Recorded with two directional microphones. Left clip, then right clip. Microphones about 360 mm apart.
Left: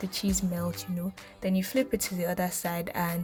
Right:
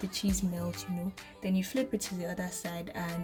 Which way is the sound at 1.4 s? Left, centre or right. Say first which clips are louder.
Left 5 dB; centre.